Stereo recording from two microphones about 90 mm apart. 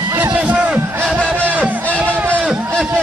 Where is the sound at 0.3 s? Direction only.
15° right (ahead or behind).